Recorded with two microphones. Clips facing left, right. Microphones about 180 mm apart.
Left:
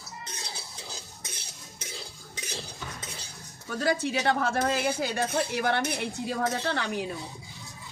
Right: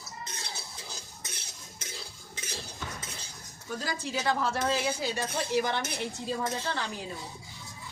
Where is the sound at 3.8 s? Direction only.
65° left (ahead or behind).